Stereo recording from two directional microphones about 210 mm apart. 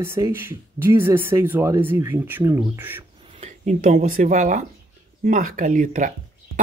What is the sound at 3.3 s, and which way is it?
Speech, 30° right (ahead or behind).